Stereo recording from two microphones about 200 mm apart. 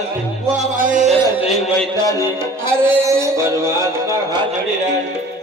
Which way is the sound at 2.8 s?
15° right (ahead or behind).